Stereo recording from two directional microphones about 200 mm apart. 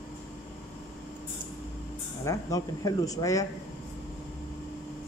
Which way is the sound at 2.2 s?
15° left (ahead or behind).